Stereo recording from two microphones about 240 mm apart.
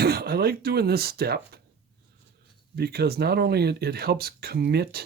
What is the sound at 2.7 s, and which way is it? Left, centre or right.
Speech, right.